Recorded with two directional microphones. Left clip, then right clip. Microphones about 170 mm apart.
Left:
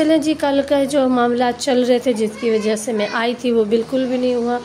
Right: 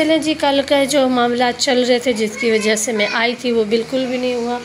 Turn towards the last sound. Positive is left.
turn(degrees=20)  # may be behind; listen again after turning